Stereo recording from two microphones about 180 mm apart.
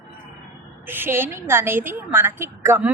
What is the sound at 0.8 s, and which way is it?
A woman's voice, 10° right (ahead or behind).